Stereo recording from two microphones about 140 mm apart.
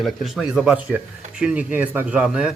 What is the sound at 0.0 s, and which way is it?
Speech, centre (ahead or behind).